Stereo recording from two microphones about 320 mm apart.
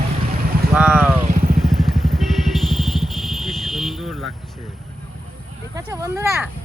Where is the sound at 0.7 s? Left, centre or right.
Centre.